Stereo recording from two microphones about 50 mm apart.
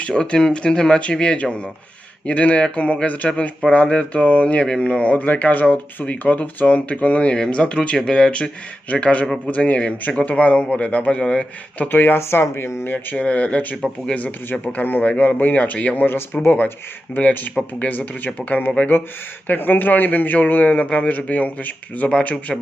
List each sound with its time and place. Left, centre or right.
0.3 s speech: centre
11.9 s speech: left
12.8 s speech: left
13.1 s a man's voice: left
16.0 s speech: left
17.2 s a man's voice: left
18.9 s a man's voice: left